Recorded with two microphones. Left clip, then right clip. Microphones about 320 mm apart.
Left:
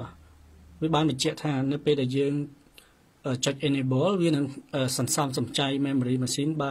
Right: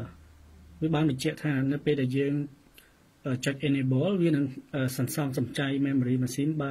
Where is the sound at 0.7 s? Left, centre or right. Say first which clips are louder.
Left 3 dB; centre.